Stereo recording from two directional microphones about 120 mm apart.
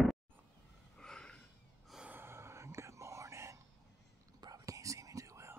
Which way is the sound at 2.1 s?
20° right (ahead or behind).